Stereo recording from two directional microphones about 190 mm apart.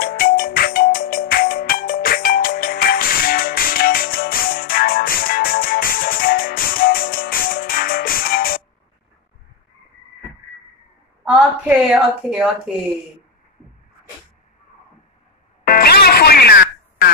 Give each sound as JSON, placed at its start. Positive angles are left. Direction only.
{"t": 0.0, "sound": "music", "side_deg": 50}
{"t": 11.9, "sound": "speech", "side_deg": 0}
{"t": 15.6, "sound": "music", "side_deg": 55}